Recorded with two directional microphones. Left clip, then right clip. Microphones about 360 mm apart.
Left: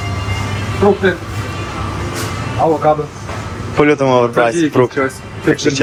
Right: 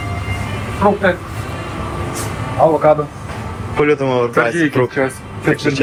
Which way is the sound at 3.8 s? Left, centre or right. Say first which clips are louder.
Left 3 dB; centre.